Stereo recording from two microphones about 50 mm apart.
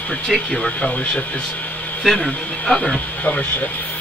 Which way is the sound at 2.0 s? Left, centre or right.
Centre.